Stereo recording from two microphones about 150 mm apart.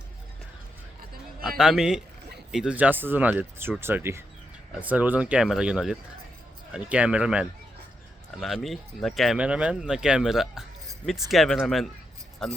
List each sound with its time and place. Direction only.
1.5 s speech: centre (ahead or behind)